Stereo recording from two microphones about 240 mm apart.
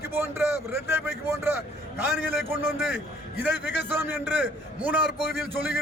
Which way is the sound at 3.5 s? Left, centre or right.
Left.